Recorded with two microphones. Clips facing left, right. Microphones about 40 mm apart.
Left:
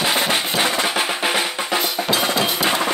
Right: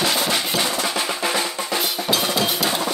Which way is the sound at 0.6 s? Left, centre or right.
Left.